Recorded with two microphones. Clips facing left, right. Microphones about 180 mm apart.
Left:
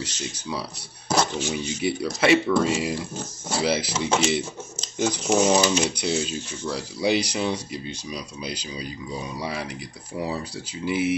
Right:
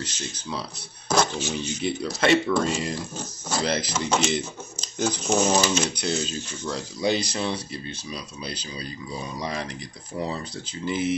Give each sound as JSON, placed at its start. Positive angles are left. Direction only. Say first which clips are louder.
{"t": 0.0, "sound": "speech", "louder": "left 2 dB", "side_deg": 10}